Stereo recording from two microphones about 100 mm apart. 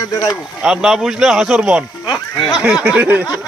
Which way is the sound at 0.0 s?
40° left (ahead or behind).